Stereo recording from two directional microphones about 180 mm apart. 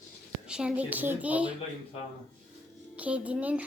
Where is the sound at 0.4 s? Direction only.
5° right (ahead or behind).